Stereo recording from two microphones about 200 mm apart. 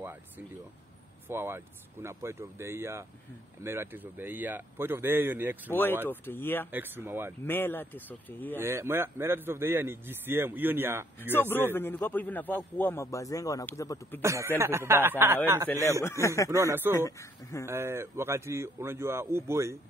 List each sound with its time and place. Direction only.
1.3 s a man's voice: 10° right (ahead or behind)
5.7 s a man's voice: 10° left (ahead or behind)
6.7 s a man's voice: 10° right (ahead or behind)
7.4 s a man's voice: 10° left (ahead or behind)
8.5 s a man's voice: 10° right (ahead or behind)
11.3 s a man's voice: 10° left (ahead or behind)
14.2 s a man's voice: 15° right (ahead or behind)
16.0 s a man's voice: 15° left (ahead or behind)
16.4 s a man's voice: 15° right (ahead or behind)
16.9 s a man's voice: 15° left (ahead or behind)
17.6 s a man's voice: 10° right (ahead or behind)